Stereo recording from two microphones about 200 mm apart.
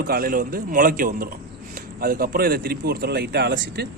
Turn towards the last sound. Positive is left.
turn(degrees=-60)  # may be behind; listen again after turning